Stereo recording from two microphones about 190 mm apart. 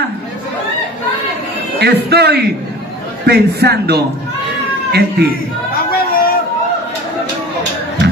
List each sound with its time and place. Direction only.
1.8 s a man's voice: 60° right (ahead or behind)
5.9 s chatter: 50° left (ahead or behind)